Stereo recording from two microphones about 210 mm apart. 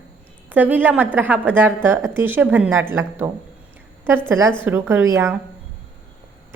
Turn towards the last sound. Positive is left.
turn(degrees=-15)  # may be behind; listen again after turning